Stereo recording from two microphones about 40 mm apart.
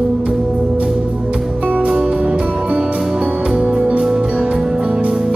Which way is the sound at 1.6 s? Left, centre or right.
Right.